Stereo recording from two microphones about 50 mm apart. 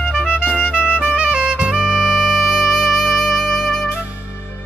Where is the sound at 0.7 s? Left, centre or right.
Left.